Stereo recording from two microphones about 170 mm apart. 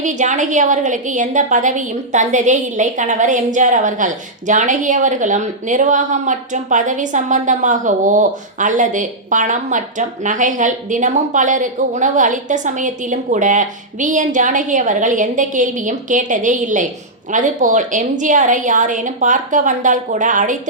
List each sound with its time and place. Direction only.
0.0 s a woman's voice: 45° right (ahead or behind)